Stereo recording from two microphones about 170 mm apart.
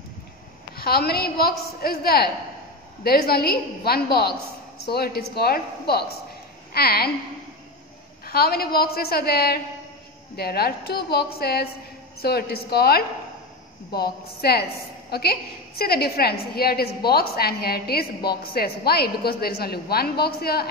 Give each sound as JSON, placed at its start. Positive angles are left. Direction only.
{"t": 0.7, "sound": "a woman's voice", "side_deg": 65}
{"t": 8.3, "sound": "a woman's voice", "side_deg": 65}